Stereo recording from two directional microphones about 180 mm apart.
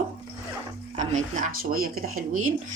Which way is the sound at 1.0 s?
45° right (ahead or behind).